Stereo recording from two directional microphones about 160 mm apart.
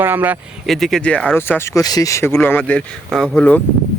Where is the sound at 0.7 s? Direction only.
Centre (ahead or behind).